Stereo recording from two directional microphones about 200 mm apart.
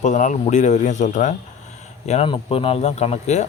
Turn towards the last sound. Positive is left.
turn(degrees=35)  # may be behind; listen again after turning